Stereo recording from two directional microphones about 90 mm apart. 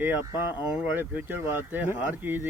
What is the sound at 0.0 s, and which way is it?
Speech, 25° right (ahead or behind).